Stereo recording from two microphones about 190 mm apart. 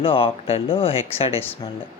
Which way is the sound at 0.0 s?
30° left (ahead or behind).